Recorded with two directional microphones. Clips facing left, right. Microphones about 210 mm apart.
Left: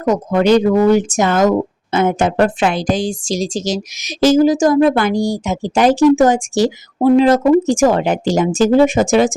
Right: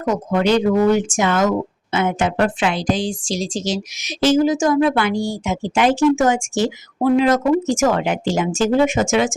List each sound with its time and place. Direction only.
0.0 s speech: 40° left (ahead or behind)